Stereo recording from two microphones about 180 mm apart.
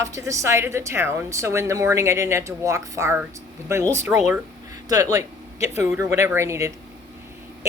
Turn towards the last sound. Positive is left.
turn(degrees=-15)  # may be behind; listen again after turning